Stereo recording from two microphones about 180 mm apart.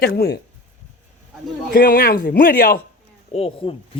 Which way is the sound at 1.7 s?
55° left (ahead or behind).